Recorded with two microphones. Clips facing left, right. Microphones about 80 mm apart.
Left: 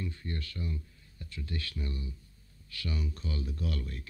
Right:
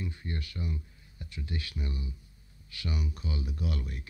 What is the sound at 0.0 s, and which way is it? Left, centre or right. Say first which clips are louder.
A man's voice: even; centre.